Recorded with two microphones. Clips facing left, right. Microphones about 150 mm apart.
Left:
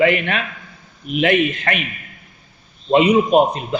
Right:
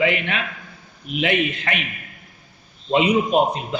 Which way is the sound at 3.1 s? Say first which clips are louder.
Left 4 dB; 50° left (ahead or behind).